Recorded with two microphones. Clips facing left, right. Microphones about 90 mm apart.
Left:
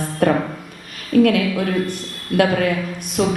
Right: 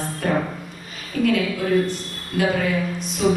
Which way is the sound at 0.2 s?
60° left (ahead or behind).